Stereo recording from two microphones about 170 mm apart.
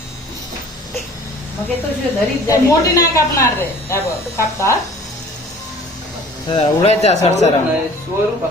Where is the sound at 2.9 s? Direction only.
20° left (ahead or behind).